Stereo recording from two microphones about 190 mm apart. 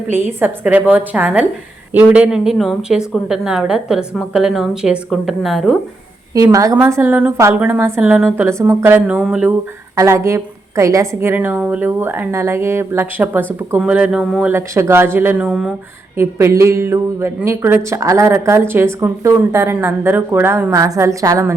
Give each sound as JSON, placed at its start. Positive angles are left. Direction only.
{"t": 0.1, "sound": "a woman's voice", "side_deg": -10}
{"t": 6.3, "sound": "a woman's voice", "side_deg": -20}